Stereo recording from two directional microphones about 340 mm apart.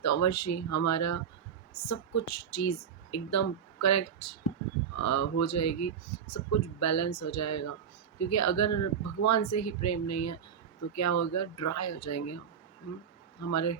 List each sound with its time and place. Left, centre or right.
0.0 s speech: left
13.4 s speech: left